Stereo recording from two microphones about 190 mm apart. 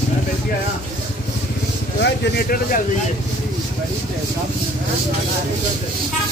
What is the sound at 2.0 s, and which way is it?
Speech, 60° left (ahead or behind).